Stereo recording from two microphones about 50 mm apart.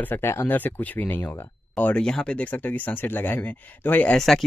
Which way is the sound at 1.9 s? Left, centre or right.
Centre.